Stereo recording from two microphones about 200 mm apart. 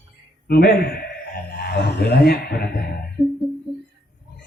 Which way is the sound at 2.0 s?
55° left (ahead or behind).